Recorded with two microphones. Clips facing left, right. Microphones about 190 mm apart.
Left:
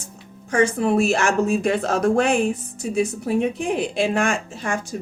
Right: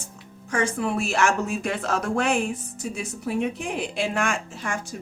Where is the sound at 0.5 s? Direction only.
30° left (ahead or behind).